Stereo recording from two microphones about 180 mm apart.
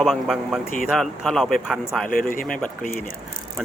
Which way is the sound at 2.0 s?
50° left (ahead or behind).